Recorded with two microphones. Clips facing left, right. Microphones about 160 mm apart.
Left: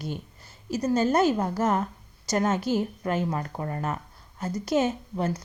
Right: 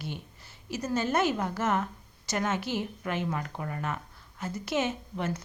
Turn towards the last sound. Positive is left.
turn(degrees=35)  # may be behind; listen again after turning